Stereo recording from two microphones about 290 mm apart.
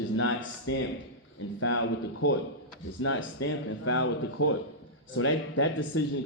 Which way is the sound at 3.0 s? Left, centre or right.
Left.